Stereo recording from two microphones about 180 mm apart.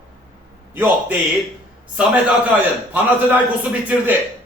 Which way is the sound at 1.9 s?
5° right (ahead or behind).